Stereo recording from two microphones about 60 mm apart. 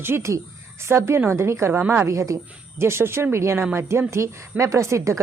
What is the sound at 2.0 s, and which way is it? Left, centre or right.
Speech, right.